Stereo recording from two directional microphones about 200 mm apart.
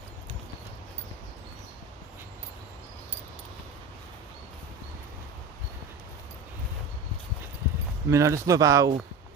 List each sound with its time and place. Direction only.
8.1 s speech: 15° right (ahead or behind)